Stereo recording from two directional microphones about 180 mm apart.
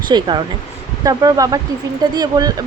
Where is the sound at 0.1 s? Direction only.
25° right (ahead or behind).